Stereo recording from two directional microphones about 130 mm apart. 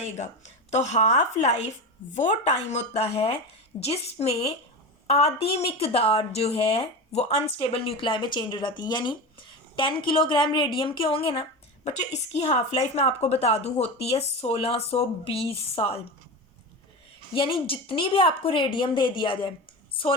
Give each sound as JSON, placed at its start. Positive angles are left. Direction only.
{"t": 0.0, "sound": "a woman's voice", "side_deg": 60}
{"t": 11.9, "sound": "a woman's voice", "side_deg": 55}
{"t": 17.3, "sound": "a woman's voice", "side_deg": 40}